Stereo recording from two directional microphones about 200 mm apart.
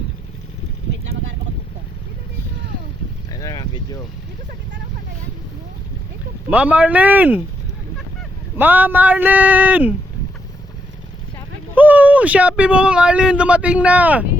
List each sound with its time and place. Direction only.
3.3 s boat: 20° left (ahead or behind)
6.5 s speech: 5° right (ahead or behind)
8.5 s speech: 10° right (ahead or behind)
11.7 s speech: 10° right (ahead or behind)